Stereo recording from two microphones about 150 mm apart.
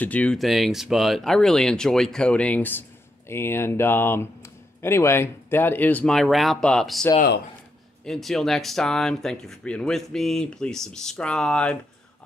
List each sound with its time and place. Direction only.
0.0 s speech: 10° left (ahead or behind)
7.2 s speech: 90° left
8.0 s speech: centre (ahead or behind)